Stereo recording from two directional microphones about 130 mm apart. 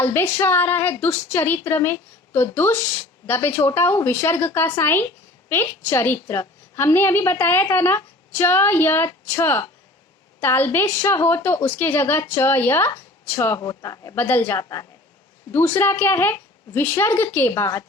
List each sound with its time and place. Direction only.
0.0 s a woman's voice: 15° left (ahead or behind)
13.6 s a woman's voice: 30° left (ahead or behind)
14.2 s a woman's voice: 15° left (ahead or behind)